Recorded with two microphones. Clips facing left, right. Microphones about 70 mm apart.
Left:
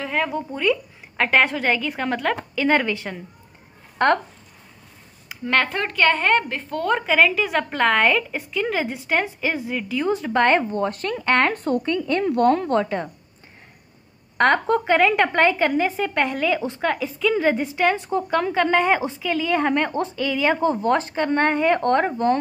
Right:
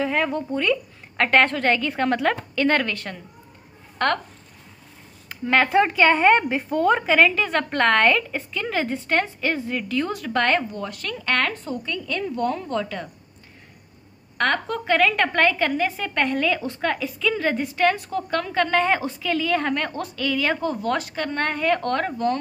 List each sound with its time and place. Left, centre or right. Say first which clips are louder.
0.0 s a woman's voice: right 1 dB; centre; by 4.1 s left
5.3 s a woman's voice: right 3 dB; centre; by 10.6 s left
10.7 s a woman's voice: left 7 dB; left
11.5 s a woman's voice: left 8 dB; left
11.8 s speech: left 6 dB; left
12.3 s a woman's voice: left 8 dB; left
12.7 s a woman's voice: left 5 dB; left
14.4 s a woman's voice: left 5 dB; left
19.9 s a woman's voice: left 6 dB; left
20.2 s a woman's voice: left 2 dB; centre